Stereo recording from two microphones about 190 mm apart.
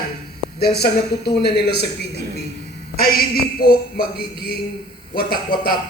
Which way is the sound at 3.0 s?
50° left (ahead or behind).